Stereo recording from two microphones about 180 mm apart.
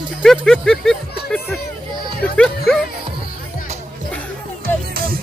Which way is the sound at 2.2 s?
5° left (ahead or behind).